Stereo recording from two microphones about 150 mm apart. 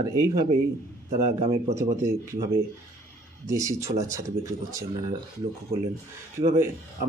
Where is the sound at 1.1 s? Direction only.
45° right (ahead or behind).